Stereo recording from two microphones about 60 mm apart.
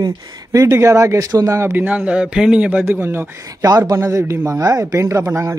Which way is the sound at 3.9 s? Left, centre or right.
Right.